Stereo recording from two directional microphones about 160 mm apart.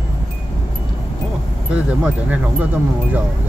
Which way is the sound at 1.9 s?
10° right (ahead or behind).